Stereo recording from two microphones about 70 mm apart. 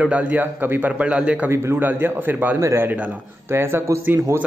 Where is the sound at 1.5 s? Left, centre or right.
Right.